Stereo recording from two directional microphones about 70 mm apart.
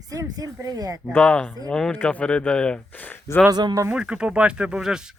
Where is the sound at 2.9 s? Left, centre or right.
Left.